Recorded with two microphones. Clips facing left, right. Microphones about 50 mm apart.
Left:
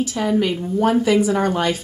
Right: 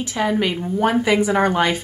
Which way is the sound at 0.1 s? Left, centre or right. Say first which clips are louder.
Left 1 dB; right.